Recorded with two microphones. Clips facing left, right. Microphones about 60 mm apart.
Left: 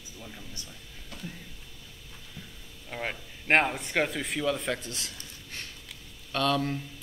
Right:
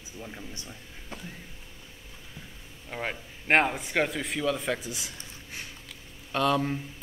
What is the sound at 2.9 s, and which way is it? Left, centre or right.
Speech, centre.